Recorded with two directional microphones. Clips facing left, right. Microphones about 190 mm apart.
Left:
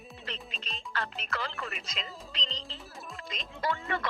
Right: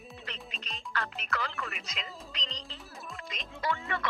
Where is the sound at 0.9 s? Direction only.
30° left (ahead or behind).